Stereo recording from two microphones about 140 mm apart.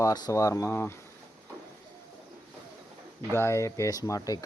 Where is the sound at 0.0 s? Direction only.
25° left (ahead or behind).